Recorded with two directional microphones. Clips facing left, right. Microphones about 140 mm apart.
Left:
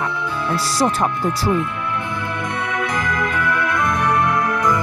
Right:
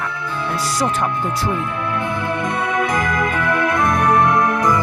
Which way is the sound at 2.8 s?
20° right (ahead or behind).